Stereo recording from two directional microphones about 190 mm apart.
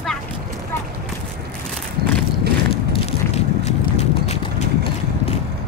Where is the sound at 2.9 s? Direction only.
30° left (ahead or behind).